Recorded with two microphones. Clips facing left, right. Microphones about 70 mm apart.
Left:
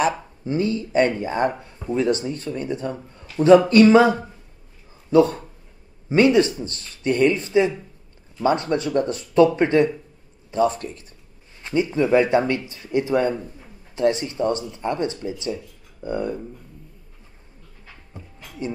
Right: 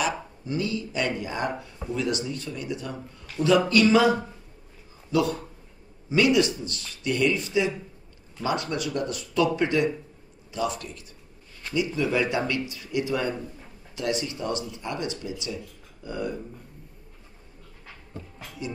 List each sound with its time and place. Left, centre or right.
0.0 s speech: left
18.1 s speech: centre
18.6 s speech: left